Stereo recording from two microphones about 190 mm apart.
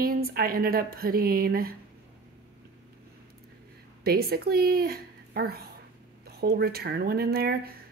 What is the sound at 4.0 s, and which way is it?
Speech, 55° right (ahead or behind).